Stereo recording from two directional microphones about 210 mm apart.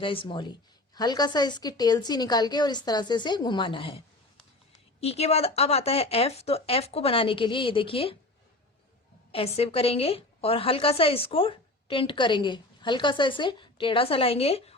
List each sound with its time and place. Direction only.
0.0 s a woman's voice: 25° left (ahead or behind)
9.3 s a woman's voice: 30° left (ahead or behind)